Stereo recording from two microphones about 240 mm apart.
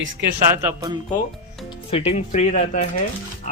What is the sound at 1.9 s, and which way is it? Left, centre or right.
Speech, left.